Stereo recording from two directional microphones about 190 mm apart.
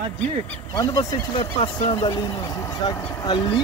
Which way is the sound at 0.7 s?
20° left (ahead or behind).